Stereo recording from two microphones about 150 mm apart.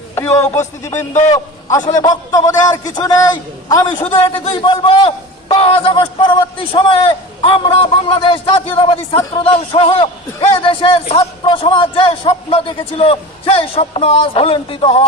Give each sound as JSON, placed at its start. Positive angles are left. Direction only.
{"t": 0.2, "sound": "a sound", "side_deg": 20}
{"t": 0.4, "sound": "speech", "side_deg": 50}
{"t": 1.9, "sound": "a man's voice", "side_deg": 25}
{"t": 4.0, "sound": "a man's voice", "side_deg": 40}